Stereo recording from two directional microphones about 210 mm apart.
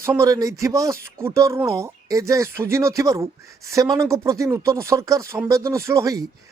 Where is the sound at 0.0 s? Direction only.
15° right (ahead or behind).